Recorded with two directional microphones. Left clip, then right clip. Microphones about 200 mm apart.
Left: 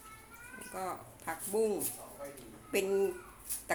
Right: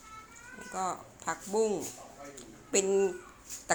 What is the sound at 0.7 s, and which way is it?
A woman's voice, 20° right (ahead or behind).